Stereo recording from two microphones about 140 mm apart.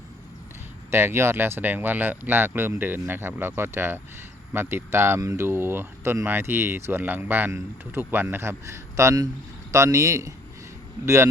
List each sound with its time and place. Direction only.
0.9 s speech: 20° right (ahead or behind)